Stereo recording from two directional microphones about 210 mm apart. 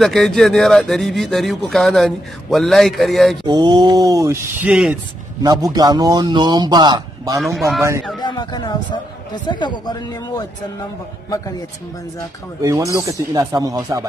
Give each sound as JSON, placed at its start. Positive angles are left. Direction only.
{"t": 0.0, "sound": "speech", "side_deg": 0}
{"t": 3.4, "sound": "speech", "side_deg": -20}
{"t": 5.4, "sound": "a man's voice", "side_deg": -20}
{"t": 7.3, "sound": "speech", "side_deg": 0}
{"t": 8.2, "sound": "a man's voice", "side_deg": 20}
{"t": 12.6, "sound": "speech", "side_deg": -15}